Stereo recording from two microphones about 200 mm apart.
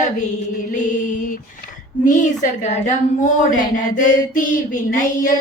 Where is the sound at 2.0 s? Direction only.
40° left (ahead or behind).